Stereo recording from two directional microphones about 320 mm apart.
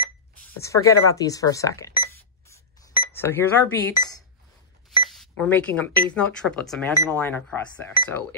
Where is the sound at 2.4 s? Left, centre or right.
Centre.